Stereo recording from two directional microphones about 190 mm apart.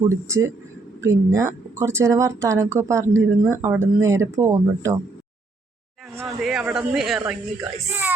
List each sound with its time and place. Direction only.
0.1 s speech: 15° right (ahead or behind)
6.2 s speech: centre (ahead or behind)